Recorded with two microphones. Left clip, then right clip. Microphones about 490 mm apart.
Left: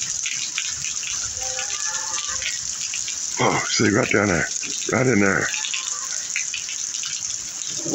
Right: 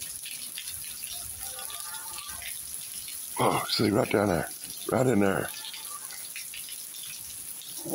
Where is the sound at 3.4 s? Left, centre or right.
Right.